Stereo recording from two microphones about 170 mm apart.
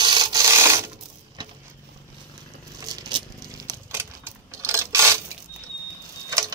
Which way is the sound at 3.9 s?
15° right (ahead or behind).